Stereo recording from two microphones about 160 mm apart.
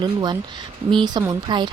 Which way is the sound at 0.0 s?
25° right (ahead or behind).